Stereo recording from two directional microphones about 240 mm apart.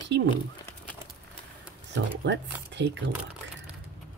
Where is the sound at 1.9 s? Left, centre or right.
Right.